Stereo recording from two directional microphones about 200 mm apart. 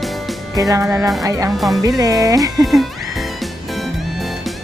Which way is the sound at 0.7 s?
10° right (ahead or behind).